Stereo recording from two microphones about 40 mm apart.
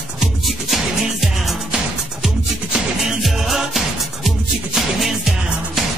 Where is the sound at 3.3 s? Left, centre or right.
Centre.